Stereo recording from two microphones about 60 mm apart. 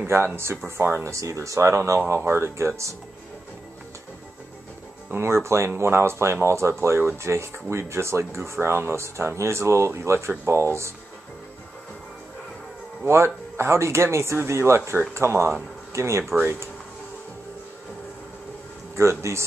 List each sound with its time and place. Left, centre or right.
0.0 s speech: right
2.0 s speech: right
5.1 s speech: right
13.0 s speech: right
18.9 s speech: right